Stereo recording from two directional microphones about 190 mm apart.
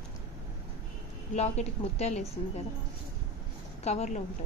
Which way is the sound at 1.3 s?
35° left (ahead or behind).